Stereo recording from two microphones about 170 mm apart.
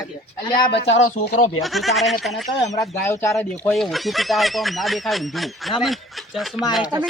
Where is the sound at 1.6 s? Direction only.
Centre (ahead or behind).